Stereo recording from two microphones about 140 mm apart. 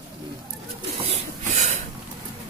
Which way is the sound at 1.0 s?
55° right (ahead or behind).